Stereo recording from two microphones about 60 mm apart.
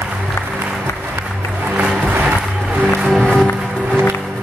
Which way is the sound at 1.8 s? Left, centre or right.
Centre.